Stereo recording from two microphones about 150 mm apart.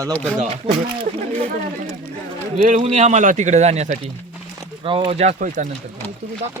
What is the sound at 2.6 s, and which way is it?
Speech, 50° right (ahead or behind).